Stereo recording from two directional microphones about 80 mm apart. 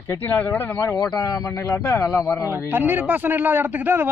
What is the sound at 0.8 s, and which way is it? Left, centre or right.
Speech, left.